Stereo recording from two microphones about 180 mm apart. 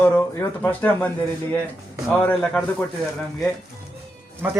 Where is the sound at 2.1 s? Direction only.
10° left (ahead or behind).